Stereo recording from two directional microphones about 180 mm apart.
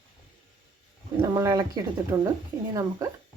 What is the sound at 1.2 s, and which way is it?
A woman's voice, 20° right (ahead or behind).